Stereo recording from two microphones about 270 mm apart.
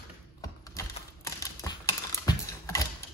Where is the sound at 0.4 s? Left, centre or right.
Centre.